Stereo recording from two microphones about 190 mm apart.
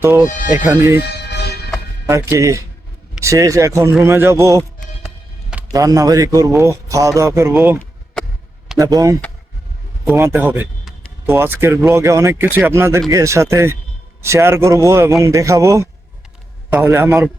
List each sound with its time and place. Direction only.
0.0 s speech: 10° right (ahead or behind)
0.9 s music: 60° left (ahead or behind)
2.0 s speech: 15° right (ahead or behind)
5.7 s speech: 20° right (ahead or behind)
8.8 s speech: 20° right (ahead or behind)